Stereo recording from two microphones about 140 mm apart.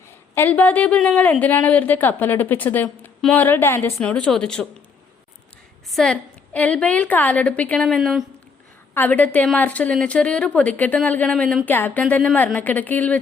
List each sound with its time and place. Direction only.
0.3 s a woman's voice: 10° left (ahead or behind)
5.9 s a woman's voice: 5° left (ahead or behind)
9.0 s a woman's voice: 10° left (ahead or behind)